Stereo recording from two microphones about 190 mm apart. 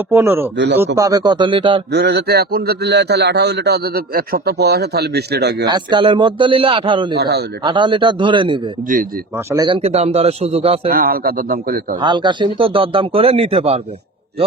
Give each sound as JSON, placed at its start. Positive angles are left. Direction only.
{"t": 0.1, "sound": "speech", "side_deg": -10}
{"t": 0.5, "sound": "speech", "side_deg": -65}
{"t": 0.9, "sound": "speech", "side_deg": -20}
{"t": 1.9, "sound": "a man's voice", "side_deg": -60}
{"t": 5.6, "sound": "speech", "side_deg": -25}
{"t": 7.2, "sound": "a man's voice", "side_deg": -60}
{"t": 7.6, "sound": "speech", "side_deg": -25}
{"t": 10.8, "sound": "a man's voice", "side_deg": -50}
{"t": 11.9, "sound": "speech", "side_deg": -25}